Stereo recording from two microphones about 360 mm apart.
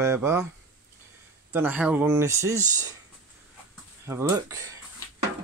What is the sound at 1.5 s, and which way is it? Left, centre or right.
Speech, centre.